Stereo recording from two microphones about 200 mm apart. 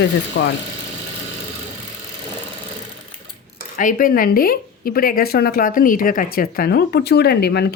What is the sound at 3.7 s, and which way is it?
A woman's voice, 40° left (ahead or behind).